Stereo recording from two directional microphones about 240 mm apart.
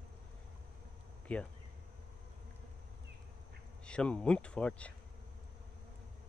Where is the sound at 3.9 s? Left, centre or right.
Centre.